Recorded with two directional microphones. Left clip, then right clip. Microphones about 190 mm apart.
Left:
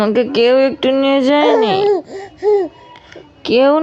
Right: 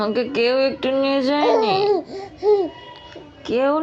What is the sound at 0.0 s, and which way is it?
Speech, 50° left (ahead or behind).